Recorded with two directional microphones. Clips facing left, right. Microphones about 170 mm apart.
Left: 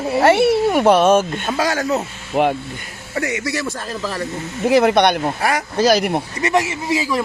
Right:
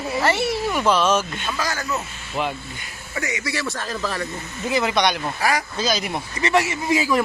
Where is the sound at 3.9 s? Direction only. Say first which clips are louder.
Left 2 dB; 30° left (ahead or behind).